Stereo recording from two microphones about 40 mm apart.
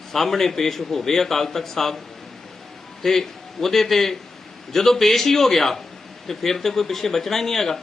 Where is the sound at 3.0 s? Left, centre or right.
Centre.